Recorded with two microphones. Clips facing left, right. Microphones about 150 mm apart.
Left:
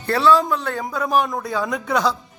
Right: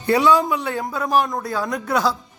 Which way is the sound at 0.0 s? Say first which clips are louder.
Even; 15° right (ahead or behind).